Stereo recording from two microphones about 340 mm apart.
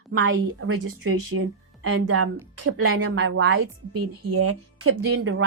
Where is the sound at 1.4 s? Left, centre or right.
Right.